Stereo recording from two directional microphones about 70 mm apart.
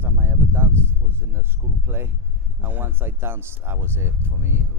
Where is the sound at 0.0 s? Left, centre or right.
Right.